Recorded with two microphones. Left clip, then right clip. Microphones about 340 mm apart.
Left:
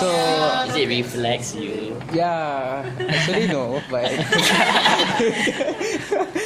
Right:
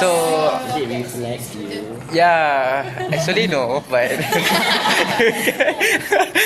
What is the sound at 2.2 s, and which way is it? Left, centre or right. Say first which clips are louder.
Speech: right 8 dB; right.